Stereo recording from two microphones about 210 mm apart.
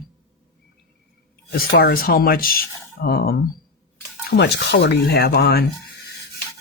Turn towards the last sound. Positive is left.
turn(degrees=50)  # may be behind; listen again after turning